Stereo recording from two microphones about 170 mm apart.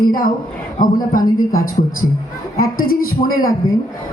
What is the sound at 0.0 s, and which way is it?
A woman's voice, 60° left (ahead or behind).